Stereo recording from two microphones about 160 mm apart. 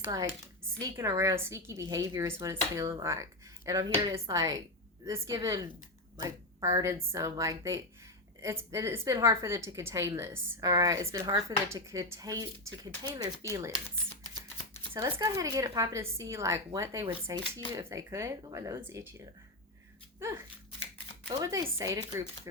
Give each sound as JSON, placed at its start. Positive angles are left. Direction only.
{"t": 0.8, "sound": "a woman's voice", "side_deg": -20}
{"t": 14.9, "sound": "a woman's voice", "side_deg": -20}
{"t": 21.4, "sound": "a woman's voice", "side_deg": -20}